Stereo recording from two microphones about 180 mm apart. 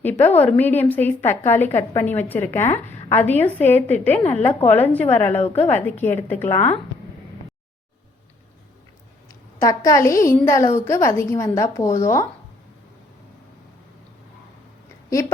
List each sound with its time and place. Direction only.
0.0 s a woman's voice: 10° left (ahead or behind)
9.6 s a woman's voice: 15° left (ahead or behind)